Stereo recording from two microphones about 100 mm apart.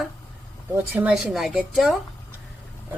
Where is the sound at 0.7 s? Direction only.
20° right (ahead or behind).